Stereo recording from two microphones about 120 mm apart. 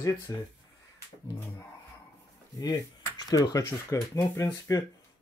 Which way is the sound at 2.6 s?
35° left (ahead or behind).